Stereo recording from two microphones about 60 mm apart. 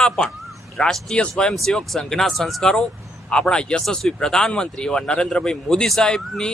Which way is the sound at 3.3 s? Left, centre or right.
Centre.